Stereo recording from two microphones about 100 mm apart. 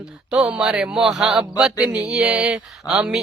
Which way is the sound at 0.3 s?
10° right (ahead or behind).